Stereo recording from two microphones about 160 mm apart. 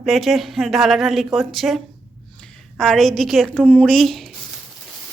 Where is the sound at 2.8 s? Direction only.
5° left (ahead or behind).